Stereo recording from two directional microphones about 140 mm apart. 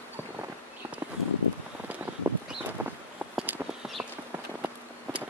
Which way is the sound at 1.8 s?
10° right (ahead or behind).